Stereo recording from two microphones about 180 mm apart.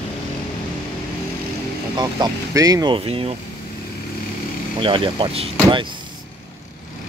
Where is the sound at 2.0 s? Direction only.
20° right (ahead or behind).